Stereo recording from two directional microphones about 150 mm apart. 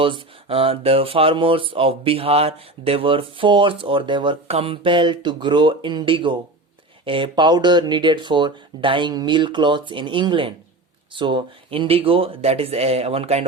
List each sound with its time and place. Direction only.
0.0 s speech: 35° right (ahead or behind)